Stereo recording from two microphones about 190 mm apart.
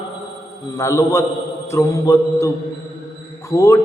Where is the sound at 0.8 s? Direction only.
15° left (ahead or behind).